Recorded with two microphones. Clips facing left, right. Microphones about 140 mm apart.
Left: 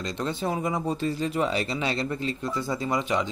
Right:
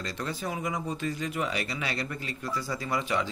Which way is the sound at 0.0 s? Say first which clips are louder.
Left 5 dB; 25° left (ahead or behind).